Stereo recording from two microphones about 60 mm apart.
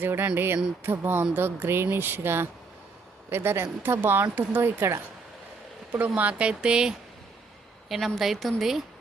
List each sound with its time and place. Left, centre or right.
0.0 s speech: right
5.9 s speech: right
7.9 s a woman's voice: centre